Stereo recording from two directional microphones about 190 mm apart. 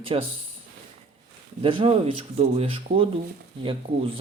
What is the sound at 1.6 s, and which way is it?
Speech, 30° right (ahead or behind).